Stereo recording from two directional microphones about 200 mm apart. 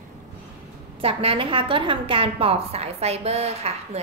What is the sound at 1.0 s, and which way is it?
A woman's voice, 30° right (ahead or behind).